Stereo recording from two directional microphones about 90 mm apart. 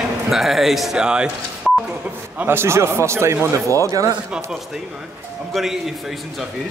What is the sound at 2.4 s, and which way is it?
A man's voice, 25° right (ahead or behind).